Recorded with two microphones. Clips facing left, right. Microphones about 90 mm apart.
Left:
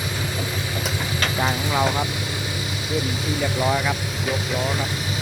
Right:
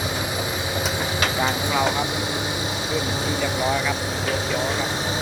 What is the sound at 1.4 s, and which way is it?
Vehicle, 20° right (ahead or behind).